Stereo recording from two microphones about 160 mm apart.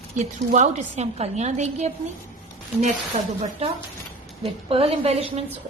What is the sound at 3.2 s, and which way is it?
Speech, 40° right (ahead or behind).